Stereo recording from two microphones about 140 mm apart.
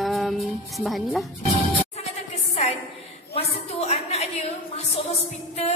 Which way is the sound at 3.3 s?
50° left (ahead or behind).